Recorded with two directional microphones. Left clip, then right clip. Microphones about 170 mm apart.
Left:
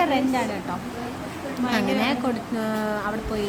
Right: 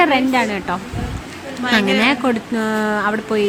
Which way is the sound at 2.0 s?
25° right (ahead or behind).